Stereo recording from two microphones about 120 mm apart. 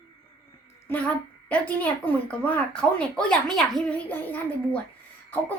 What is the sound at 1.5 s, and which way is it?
Speech, 10° left (ahead or behind).